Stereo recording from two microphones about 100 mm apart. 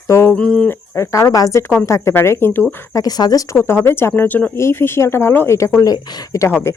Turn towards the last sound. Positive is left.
turn(degrees=25)  # may be behind; listen again after turning